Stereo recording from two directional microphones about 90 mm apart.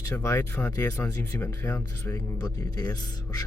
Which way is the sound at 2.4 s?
45° left (ahead or behind).